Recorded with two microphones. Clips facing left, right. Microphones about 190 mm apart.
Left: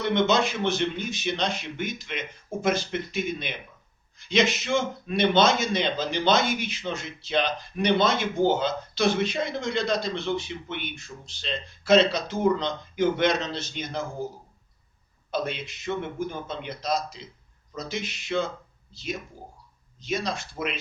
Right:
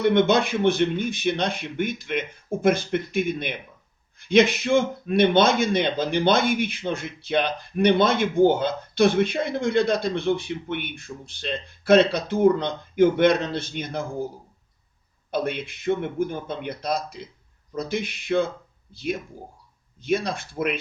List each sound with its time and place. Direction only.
0.0 s speech: 55° right (ahead or behind)
15.3 s speech: 55° right (ahead or behind)